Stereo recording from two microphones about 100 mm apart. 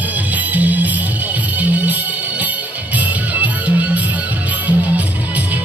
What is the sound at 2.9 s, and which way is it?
Music, 15° right (ahead or behind).